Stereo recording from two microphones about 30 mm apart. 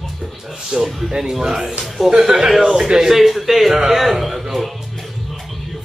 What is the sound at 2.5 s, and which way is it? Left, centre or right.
Speech, centre.